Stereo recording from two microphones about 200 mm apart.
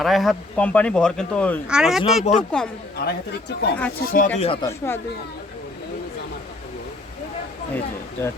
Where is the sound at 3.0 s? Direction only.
50° left (ahead or behind).